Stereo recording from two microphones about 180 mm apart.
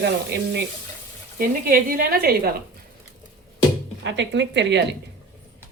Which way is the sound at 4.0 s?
80° right.